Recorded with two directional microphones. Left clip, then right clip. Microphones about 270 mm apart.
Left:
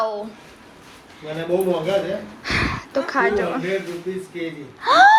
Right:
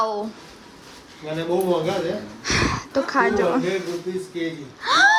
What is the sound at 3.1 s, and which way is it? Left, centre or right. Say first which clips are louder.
Speech: right 1 dB; centre.